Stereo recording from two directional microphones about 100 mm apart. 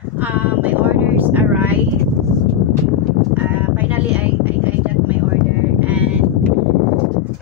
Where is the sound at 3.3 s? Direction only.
15° right (ahead or behind).